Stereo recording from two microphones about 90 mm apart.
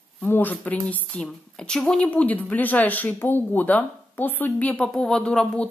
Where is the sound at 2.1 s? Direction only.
15° left (ahead or behind).